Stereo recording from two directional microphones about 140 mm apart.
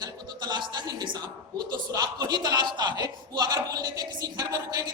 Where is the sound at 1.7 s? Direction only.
30° right (ahead or behind).